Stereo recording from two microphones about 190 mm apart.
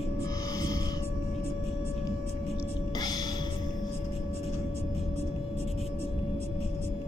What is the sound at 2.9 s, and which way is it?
Gasp, 20° left (ahead or behind).